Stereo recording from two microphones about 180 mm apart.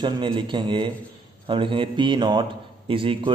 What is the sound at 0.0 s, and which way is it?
A man's voice, 30° right (ahead or behind).